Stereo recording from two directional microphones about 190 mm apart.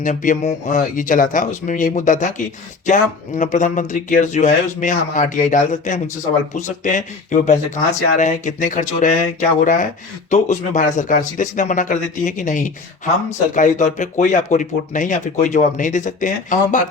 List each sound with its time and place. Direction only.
0.0 s speech: 40° left (ahead or behind)